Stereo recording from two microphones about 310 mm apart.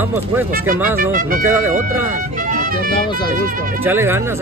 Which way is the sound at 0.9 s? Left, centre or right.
Right.